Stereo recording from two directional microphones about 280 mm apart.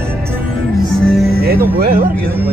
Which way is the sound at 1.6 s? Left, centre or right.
Right.